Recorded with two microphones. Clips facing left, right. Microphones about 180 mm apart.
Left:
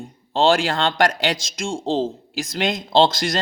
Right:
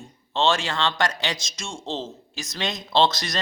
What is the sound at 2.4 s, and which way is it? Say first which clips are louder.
Speech: left 6 dB; 50° left (ahead or behind).